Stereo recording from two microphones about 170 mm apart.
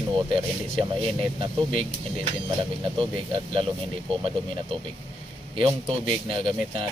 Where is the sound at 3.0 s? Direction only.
30° right (ahead or behind).